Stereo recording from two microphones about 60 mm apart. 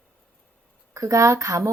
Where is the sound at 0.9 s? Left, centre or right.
Right.